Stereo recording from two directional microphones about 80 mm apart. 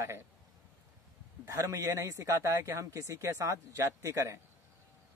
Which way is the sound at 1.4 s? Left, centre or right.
Right.